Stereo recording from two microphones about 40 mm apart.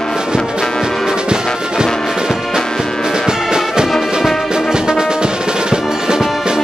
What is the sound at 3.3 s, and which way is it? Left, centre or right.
Music, centre.